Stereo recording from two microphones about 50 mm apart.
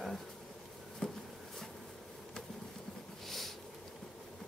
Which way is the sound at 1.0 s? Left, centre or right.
Centre.